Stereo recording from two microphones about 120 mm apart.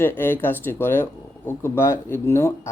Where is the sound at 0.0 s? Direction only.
20° left (ahead or behind).